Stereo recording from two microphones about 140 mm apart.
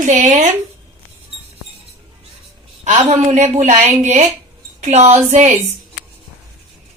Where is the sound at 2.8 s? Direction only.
60° right (ahead or behind).